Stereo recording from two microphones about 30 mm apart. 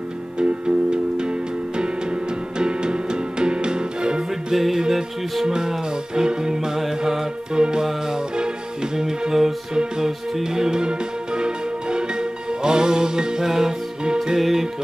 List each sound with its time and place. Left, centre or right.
0.4 s music: right
2.6 s music: right
4.5 s music: centre
7.5 s music: right
8.9 s music: right